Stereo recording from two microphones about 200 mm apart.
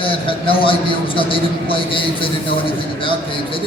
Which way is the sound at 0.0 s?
25° left (ahead or behind).